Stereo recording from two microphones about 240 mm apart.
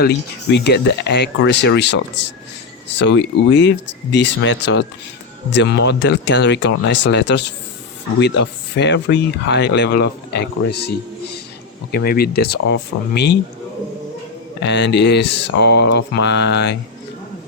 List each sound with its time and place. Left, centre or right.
0.0 s speech: left
14.6 s speech: left